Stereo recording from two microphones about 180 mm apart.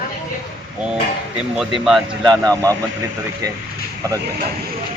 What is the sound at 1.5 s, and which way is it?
Speech, centre (ahead or behind).